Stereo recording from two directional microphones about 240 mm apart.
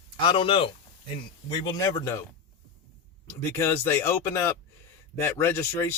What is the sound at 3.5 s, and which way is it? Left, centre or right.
Speech, centre.